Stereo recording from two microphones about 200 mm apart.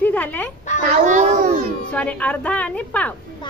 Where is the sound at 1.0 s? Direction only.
40° right (ahead or behind).